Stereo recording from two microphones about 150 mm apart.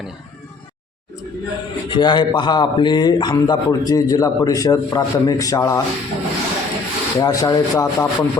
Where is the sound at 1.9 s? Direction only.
30° left (ahead or behind).